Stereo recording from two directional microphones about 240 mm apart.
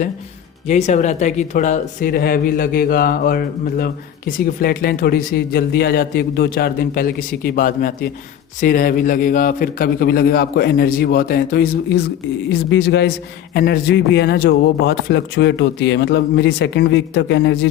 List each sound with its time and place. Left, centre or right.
0.7 s a man's voice: left